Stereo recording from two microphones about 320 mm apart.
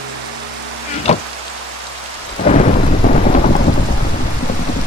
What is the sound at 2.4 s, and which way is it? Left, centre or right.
Thunder, left.